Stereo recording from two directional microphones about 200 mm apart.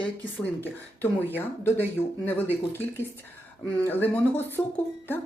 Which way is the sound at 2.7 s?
10° left (ahead or behind).